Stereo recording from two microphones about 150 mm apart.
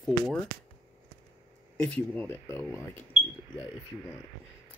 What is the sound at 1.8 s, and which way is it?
Speech, 10° left (ahead or behind).